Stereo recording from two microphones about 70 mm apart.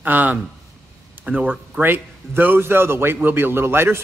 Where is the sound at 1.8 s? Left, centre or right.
Right.